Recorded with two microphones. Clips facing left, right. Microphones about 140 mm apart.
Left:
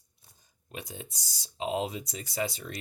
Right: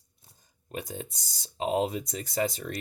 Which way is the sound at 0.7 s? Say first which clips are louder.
Right 5 dB; 45° right (ahead or behind).